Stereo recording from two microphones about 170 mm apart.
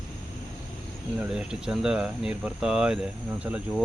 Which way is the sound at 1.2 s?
5° right (ahead or behind).